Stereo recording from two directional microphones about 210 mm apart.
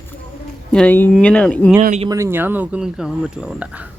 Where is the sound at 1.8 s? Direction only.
35° right (ahead or behind).